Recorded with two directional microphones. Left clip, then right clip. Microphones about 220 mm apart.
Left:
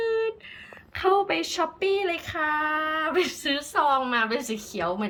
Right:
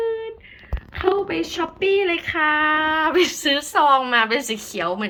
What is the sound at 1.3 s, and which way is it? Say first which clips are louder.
Speech: right 2 dB; 10° left (ahead or behind).